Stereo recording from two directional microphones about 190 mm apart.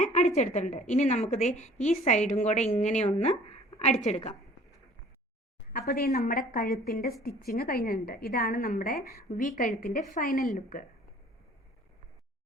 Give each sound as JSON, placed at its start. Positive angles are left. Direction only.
{"t": 0.0, "sound": "a woman's voice", "side_deg": 40}
{"t": 5.7, "sound": "a woman's voice", "side_deg": 55}